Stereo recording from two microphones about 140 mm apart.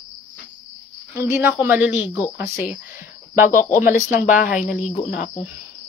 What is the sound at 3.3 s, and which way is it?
Speech, 80° left.